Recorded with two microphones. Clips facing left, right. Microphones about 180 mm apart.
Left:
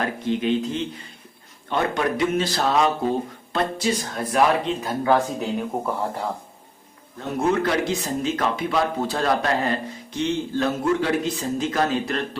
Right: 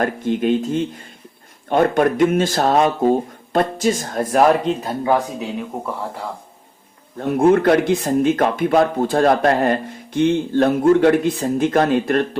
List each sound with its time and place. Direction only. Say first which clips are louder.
0.0 s speech: right 5 dB; 50° right (ahead or behind)
5.7 s speech: left 1 dB; centre (ahead or behind)
7.2 s speech: right 8 dB; 50° right (ahead or behind)